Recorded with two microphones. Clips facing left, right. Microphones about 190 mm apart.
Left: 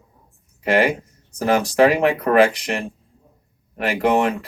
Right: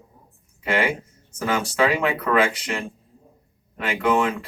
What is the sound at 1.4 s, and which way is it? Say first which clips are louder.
Speech: left 6 dB; 35° left (ahead or behind).